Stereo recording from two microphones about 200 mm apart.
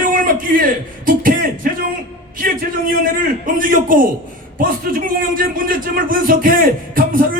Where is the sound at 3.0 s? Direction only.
45° right (ahead or behind).